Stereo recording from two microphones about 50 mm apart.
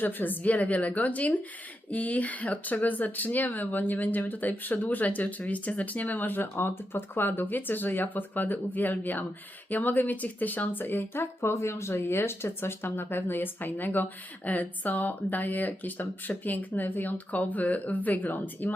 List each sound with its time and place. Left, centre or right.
0.0 s speech: left
11.2 s speech: left